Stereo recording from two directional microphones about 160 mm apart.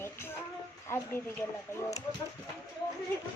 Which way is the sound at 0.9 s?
15° left (ahead or behind).